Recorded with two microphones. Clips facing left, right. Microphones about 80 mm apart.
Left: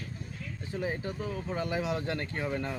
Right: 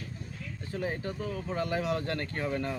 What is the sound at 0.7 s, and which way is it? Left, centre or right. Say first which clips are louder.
Speech: even; centre.